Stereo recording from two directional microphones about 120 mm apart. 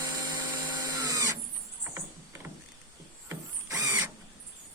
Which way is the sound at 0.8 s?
30° right (ahead or behind).